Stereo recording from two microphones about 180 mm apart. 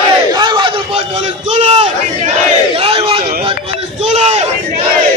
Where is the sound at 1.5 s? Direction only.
35° right (ahead or behind).